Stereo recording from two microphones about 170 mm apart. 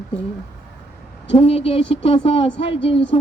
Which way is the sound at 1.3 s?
35° left (ahead or behind).